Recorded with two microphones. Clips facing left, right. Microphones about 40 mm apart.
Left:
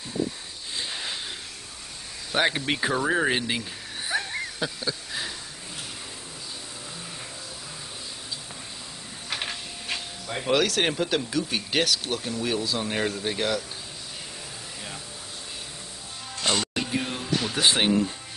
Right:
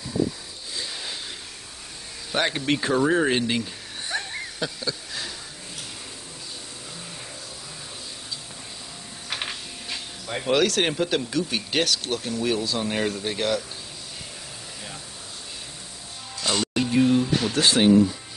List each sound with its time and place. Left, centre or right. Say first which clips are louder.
0.7 s a sound: left 1 dB; left
2.3 s speech: right 1 dB; centre
4.1 s a sound: left 2 dB; centre
9.3 s printer: right 1 dB; centre
10.2 s speech: right 2 dB; centre
16.5 s music: right 5 dB; centre
17.6 s speech: right 5 dB; left